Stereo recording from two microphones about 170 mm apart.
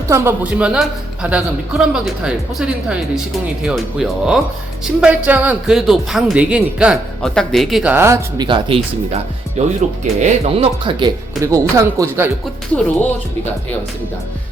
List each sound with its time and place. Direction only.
0.1 s speech: 15° right (ahead or behind)
7.9 s speech: 15° right (ahead or behind)
8.4 s speech: 30° right (ahead or behind)
9.6 s speech: 45° right (ahead or behind)
11.4 s speech: 20° right (ahead or behind)